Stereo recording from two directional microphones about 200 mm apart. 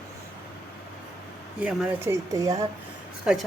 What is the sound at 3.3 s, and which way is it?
Speech, 5° right (ahead or behind).